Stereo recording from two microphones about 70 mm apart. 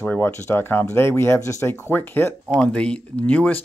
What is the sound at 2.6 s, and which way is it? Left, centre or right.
Speech, centre.